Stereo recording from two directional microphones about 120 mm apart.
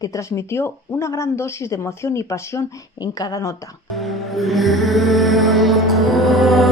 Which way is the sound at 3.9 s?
Centre (ahead or behind).